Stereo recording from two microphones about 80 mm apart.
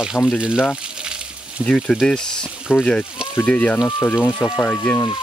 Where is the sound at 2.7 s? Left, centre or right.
Left.